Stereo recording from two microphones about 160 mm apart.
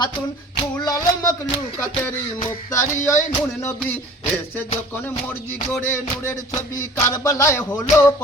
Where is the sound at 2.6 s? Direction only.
20° left (ahead or behind).